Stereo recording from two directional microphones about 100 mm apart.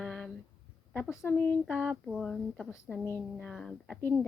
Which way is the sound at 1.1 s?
25° left (ahead or behind).